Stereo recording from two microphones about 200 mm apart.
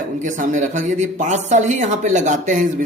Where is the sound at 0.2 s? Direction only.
40° right (ahead or behind).